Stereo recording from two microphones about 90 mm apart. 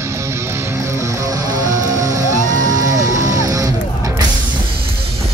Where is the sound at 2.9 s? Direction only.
40° right (ahead or behind).